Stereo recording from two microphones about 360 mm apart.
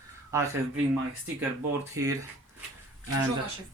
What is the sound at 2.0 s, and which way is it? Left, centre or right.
Speech, centre.